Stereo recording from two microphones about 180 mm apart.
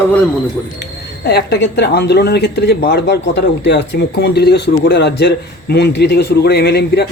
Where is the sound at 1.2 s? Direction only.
65° left (ahead or behind).